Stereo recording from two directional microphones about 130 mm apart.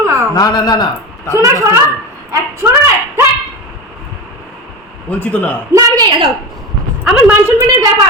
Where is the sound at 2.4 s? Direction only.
25° right (ahead or behind).